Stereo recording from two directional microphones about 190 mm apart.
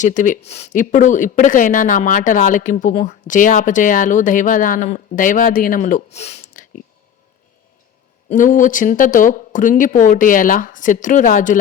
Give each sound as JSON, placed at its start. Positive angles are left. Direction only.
{"t": 0.0, "sound": "speech", "side_deg": 40}
{"t": 8.3, "sound": "speech", "side_deg": 45}